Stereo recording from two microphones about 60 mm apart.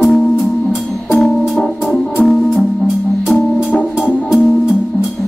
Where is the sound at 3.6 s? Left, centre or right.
Left.